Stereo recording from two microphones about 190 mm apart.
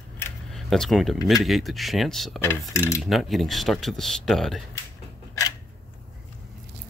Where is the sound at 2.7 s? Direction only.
15° left (ahead or behind).